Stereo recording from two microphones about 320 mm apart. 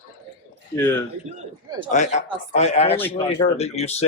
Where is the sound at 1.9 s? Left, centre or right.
Left.